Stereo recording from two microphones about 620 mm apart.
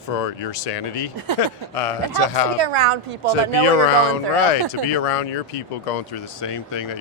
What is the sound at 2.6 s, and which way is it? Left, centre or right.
A woman's voice, right.